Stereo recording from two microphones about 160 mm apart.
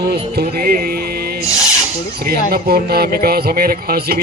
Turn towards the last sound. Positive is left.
turn(degrees=-70)  # may be behind; listen again after turning